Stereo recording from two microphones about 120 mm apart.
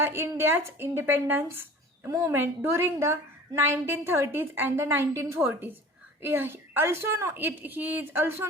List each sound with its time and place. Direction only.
0.0 s a woman's voice: 20° right (ahead or behind)